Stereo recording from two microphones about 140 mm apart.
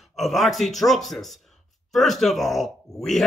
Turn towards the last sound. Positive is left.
turn(degrees=0)  # may be behind; listen again after turning